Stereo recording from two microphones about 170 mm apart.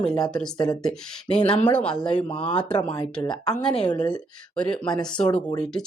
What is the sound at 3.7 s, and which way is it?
Speech, 30° left (ahead or behind).